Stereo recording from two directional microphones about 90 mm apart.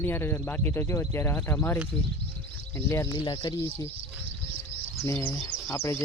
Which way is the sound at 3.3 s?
60° left (ahead or behind).